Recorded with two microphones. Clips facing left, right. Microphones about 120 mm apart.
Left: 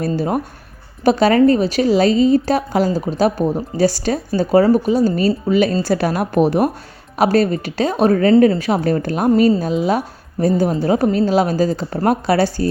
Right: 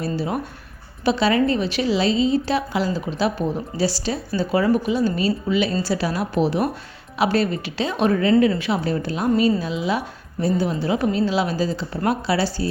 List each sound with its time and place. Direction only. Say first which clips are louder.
0.0 s a woman's voice: left 5 dB; 45° left (ahead or behind)